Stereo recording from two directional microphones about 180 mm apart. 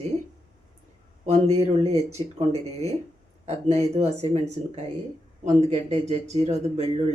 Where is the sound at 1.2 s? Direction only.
35° right (ahead or behind).